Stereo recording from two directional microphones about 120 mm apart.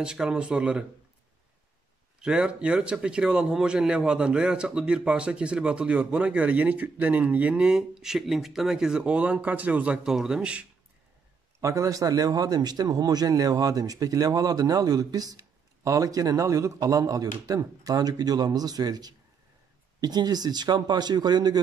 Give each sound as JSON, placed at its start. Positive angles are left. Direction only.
{"t": 0.0, "sound": "speech", "side_deg": -5}
{"t": 2.2, "sound": "speech", "side_deg": -10}
{"t": 11.6, "sound": "speech", "side_deg": -25}